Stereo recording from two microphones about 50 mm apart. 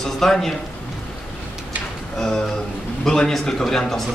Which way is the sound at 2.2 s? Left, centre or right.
Centre.